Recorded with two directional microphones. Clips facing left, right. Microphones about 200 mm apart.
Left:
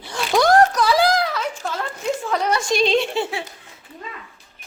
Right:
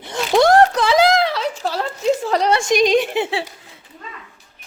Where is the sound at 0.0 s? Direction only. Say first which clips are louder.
Right 4 dB; 20° right (ahead or behind).